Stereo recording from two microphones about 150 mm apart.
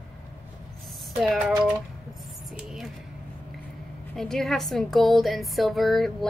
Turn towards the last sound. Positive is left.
turn(degrees=0)  # may be behind; listen again after turning